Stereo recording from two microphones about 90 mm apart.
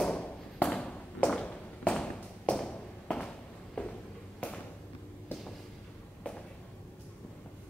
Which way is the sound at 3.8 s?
15° left (ahead or behind).